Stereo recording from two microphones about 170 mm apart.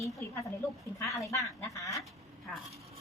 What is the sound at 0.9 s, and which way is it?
Speech, 20° left (ahead or behind).